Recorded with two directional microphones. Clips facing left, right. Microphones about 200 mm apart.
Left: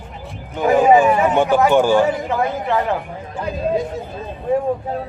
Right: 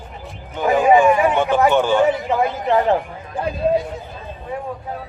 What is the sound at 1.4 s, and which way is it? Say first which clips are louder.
Speech: left 2 dB; 10° left (ahead or behind).